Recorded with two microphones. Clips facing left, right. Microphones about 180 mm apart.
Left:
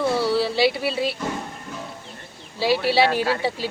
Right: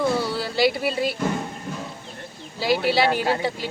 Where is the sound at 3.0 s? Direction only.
30° left (ahead or behind).